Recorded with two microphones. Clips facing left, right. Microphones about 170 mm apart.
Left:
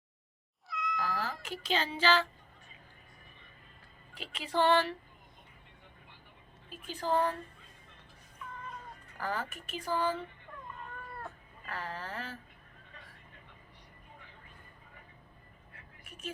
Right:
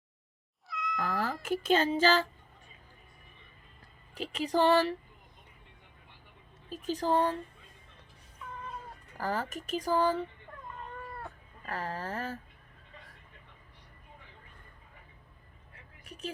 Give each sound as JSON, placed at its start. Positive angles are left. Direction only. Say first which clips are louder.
{"t": 0.7, "sound": "cat", "louder": "right 1 dB", "side_deg": 0}
{"t": 1.2, "sound": "speech", "louder": "right 7 dB", "side_deg": -50}
{"t": 4.1, "sound": "speech", "louder": "right 5 dB", "side_deg": -40}
{"t": 6.7, "sound": "speech", "louder": "right 4 dB", "side_deg": -40}
{"t": 9.1, "sound": "speech", "louder": "right 3 dB", "side_deg": -40}
{"t": 11.6, "sound": "speech", "louder": "right 4 dB", "side_deg": -40}